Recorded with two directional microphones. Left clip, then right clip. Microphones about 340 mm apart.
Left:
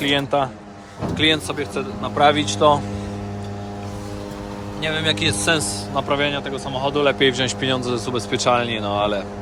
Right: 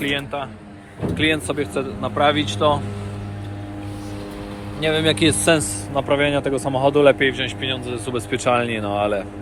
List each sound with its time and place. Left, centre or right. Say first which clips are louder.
0.0 s a man's voice: left 5 dB; centre
5.2 s speech: right 2 dB; centre
7.2 s speech: left 2 dB; left
7.7 s speech: left 3 dB; left